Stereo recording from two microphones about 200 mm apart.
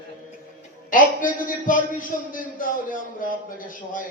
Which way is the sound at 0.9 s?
45° left (ahead or behind).